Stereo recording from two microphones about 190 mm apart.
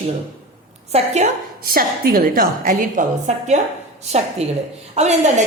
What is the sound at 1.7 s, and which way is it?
A woman's voice, 50° right (ahead or behind).